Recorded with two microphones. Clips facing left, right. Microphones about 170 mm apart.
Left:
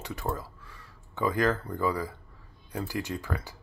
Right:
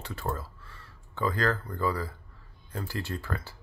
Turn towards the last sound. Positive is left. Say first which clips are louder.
# left 1 dB
turn(degrees=15)  # may be behind; listen again after turning